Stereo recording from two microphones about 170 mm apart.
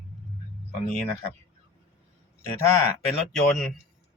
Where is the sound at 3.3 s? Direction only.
Centre (ahead or behind).